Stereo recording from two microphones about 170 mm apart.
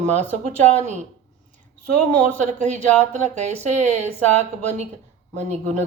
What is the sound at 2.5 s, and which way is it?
Speech, 45° right (ahead or behind).